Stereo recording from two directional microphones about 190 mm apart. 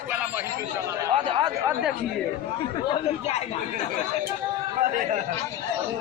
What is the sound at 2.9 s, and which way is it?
Speech, 35° left (ahead or behind).